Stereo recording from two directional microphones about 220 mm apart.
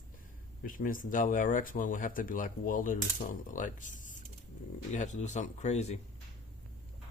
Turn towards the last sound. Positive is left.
turn(degrees=30)  # may be behind; listen again after turning